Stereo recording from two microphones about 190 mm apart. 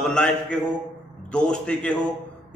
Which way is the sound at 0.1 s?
5° left (ahead or behind).